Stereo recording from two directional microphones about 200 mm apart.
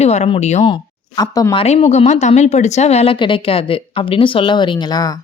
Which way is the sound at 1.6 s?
35° left (ahead or behind).